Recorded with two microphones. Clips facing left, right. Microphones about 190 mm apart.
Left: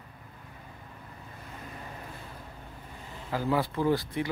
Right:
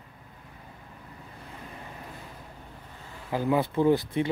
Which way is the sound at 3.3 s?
20° right (ahead or behind).